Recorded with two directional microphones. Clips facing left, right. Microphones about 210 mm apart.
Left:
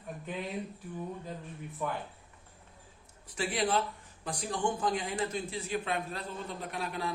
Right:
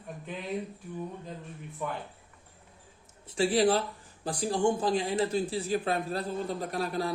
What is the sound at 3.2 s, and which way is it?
Speech, 30° right (ahead or behind).